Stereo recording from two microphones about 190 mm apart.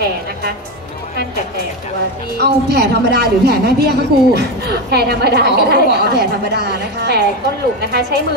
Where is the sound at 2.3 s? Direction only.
60° right (ahead or behind).